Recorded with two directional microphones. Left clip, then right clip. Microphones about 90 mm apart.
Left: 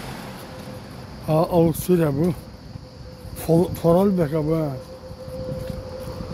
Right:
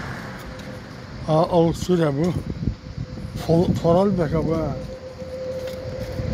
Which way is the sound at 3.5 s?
90° left.